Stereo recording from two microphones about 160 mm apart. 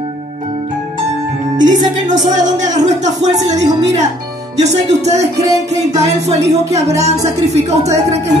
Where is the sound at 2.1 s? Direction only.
50° right (ahead or behind).